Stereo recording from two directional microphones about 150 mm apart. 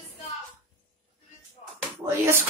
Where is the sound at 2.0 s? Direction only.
15° right (ahead or behind).